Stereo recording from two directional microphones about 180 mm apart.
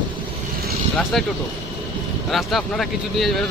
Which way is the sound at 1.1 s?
Centre (ahead or behind).